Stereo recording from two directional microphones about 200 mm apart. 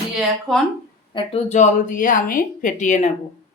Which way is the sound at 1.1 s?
30° left (ahead or behind).